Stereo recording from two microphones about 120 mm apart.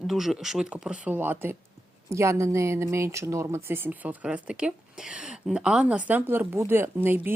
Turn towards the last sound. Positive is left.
turn(degrees=-15)  # may be behind; listen again after turning